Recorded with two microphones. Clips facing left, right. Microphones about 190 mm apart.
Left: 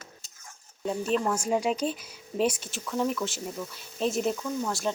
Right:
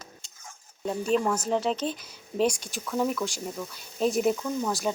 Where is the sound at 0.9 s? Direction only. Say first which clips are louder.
Right 2 dB; centre (ahead or behind).